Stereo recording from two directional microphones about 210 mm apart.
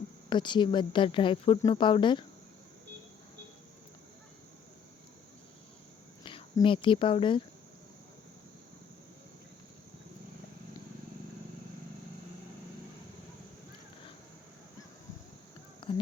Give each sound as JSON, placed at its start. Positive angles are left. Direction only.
{"t": 0.3, "sound": "speech", "side_deg": 20}
{"t": 6.2, "sound": "speech", "side_deg": 25}
{"t": 15.8, "sound": "a sound", "side_deg": 25}